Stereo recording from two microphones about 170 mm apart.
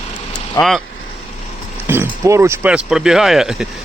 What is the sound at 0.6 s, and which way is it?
Speech, 20° left (ahead or behind).